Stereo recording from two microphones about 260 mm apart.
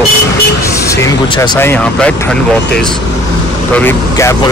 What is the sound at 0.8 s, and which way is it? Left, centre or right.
Speech, centre.